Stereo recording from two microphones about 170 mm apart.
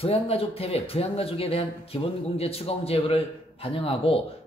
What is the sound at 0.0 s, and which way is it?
Speech, 35° left (ahead or behind).